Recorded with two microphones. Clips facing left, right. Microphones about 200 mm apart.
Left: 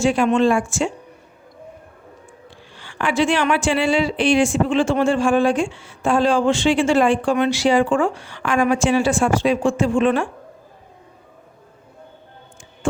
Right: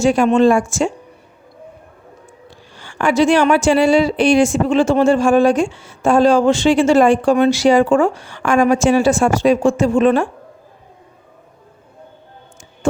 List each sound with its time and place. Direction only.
0.0 s speech: 40° right (ahead or behind)
2.7 s speech: 45° right (ahead or behind)
12.8 s music: 40° right (ahead or behind)